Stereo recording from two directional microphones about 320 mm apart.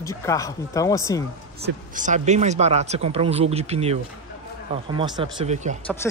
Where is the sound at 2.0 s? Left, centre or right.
Right.